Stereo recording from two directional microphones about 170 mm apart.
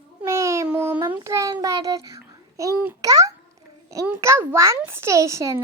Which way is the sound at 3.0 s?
20° right (ahead or behind).